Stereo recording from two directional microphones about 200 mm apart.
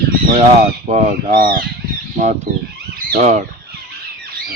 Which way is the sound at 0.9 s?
35° right (ahead or behind).